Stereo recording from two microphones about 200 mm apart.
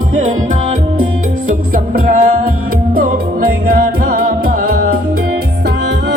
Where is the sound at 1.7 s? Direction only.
45° right (ahead or behind).